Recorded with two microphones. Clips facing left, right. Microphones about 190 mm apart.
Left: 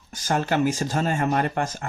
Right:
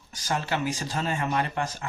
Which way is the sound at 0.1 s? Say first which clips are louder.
Left 5 dB; 50° left (ahead or behind).